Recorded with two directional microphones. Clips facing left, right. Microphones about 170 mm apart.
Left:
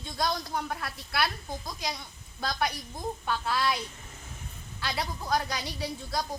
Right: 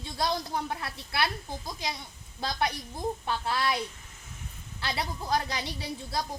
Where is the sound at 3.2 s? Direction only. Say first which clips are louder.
Left 4 dB; 25° right (ahead or behind).